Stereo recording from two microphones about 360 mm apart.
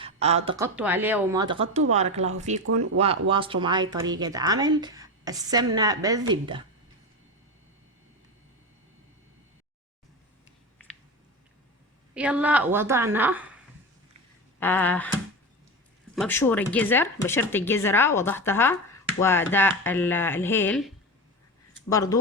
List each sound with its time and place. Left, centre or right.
0.0 s speech: centre
12.1 s speech: centre
14.6 s speech: centre
16.1 s speech: centre